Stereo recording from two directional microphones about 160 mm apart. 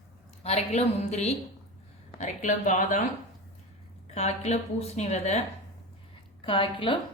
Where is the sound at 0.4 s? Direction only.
45° left (ahead or behind).